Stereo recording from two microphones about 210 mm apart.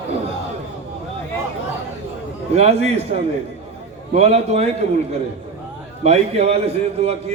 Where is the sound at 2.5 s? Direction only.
30° right (ahead or behind).